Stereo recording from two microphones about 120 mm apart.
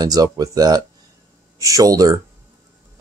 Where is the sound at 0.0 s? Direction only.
30° right (ahead or behind).